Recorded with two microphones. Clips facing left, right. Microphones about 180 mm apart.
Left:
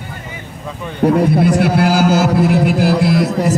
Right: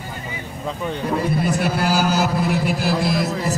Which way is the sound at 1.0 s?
70° left (ahead or behind).